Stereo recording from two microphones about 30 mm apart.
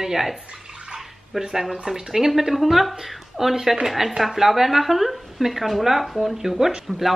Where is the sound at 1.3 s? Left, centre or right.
Centre.